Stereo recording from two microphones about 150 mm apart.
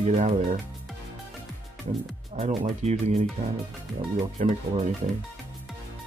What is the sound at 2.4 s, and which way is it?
Speech, 50° right (ahead or behind).